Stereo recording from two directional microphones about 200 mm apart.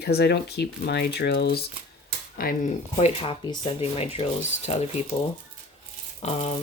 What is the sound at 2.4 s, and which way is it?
Speech, 40° left (ahead or behind).